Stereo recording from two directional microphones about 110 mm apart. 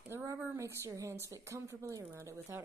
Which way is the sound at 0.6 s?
30° right (ahead or behind).